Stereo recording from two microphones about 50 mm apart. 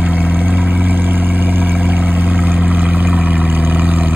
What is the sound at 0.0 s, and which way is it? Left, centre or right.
Vehicle, right.